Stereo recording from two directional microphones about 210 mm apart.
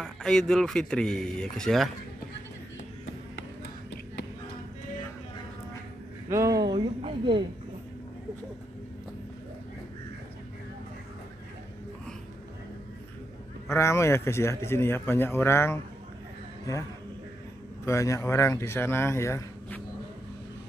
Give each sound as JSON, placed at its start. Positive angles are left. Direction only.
{"t": 0.0, "sound": "speech", "side_deg": 0}
{"t": 6.2, "sound": "a woman's voice", "side_deg": -15}
{"t": 13.7, "sound": "speech", "side_deg": 15}
{"t": 17.8, "sound": "speech", "side_deg": 15}